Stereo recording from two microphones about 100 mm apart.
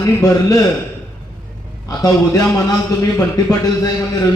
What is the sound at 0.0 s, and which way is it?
Speech, 30° left (ahead or behind).